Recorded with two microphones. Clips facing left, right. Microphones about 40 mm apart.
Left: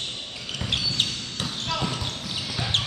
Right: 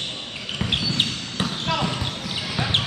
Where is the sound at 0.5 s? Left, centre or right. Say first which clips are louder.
Right 3 dB; right.